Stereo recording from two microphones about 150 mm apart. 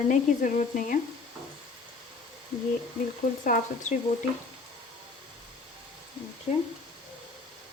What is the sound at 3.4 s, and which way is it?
Speech, 65° left (ahead or behind).